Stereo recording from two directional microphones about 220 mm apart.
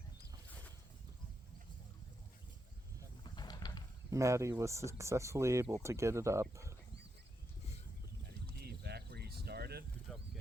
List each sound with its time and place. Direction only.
3.3 s pulleys: 20° left (ahead or behind)
4.1 s speech: 15° right (ahead or behind)
8.5 s a sound: 45° right (ahead or behind)
10.1 s bird: centre (ahead or behind)